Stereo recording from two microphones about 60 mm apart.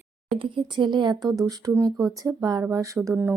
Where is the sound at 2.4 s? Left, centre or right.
Right.